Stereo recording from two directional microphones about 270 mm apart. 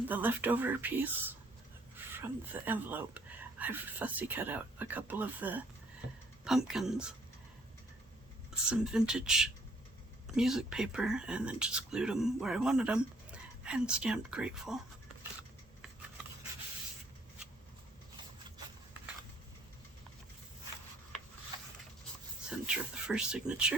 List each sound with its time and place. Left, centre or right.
0.1 s speech: centre
8.7 s speech: centre
22.4 s speech: centre